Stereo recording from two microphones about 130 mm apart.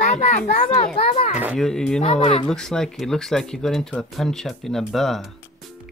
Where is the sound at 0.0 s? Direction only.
60° left (ahead or behind).